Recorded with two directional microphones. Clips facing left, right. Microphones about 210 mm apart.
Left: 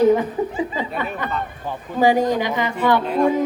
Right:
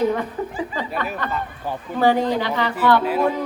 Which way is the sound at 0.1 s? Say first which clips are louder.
Left 6 dB; 20° left (ahead or behind).